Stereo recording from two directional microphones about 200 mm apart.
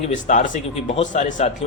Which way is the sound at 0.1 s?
40° left (ahead or behind).